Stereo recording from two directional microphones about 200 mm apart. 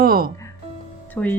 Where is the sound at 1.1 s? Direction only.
10° left (ahead or behind).